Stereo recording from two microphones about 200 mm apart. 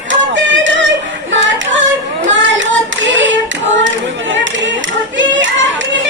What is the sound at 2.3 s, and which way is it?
Child singing, 70° right (ahead or behind).